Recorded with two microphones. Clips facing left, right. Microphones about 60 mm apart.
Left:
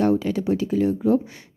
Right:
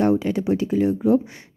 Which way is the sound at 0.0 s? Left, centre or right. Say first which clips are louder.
Right 1 dB; right.